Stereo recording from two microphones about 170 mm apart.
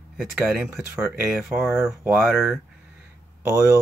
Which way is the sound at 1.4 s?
10° right (ahead or behind).